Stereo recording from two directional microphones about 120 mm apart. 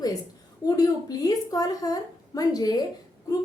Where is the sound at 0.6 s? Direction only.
30° left (ahead or behind).